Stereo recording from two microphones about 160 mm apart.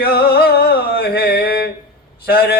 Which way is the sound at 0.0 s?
75° left (ahead or behind).